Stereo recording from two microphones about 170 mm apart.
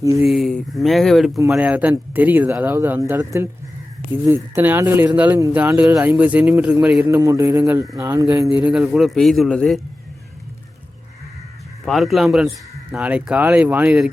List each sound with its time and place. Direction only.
0.0 s speech: 20° right (ahead or behind)
0.3 s speech: centre (ahead or behind); by 8.4 s 15° right (ahead or behind)
8.5 s speech: 5° right (ahead or behind)
11.9 s speech: centre (ahead or behind)